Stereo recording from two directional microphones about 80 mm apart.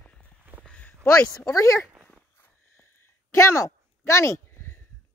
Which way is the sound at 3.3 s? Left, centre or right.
Left.